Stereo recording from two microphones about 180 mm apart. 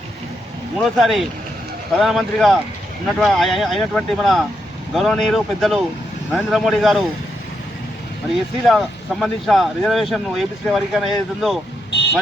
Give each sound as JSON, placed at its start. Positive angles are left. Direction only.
{"t": 0.8, "sound": "speech", "side_deg": 0}
{"t": 8.6, "sound": "speech", "side_deg": 0}
{"t": 11.9, "sound": "vehicle", "side_deg": 75}